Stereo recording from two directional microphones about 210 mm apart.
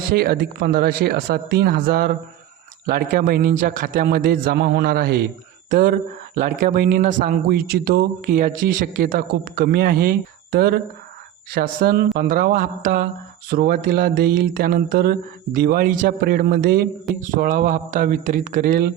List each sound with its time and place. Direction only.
0.1 s speech: 45° right (ahead or behind)